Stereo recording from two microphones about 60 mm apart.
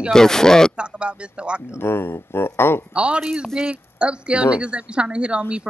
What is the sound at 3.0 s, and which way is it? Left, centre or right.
A woman's voice, centre.